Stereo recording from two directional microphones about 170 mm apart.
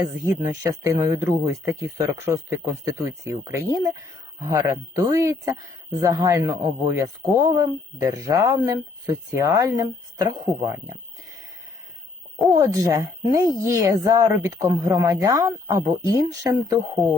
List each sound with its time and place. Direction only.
0.3 s a man's voice: 25° right (ahead or behind)
12.5 s a man's voice: 20° right (ahead or behind)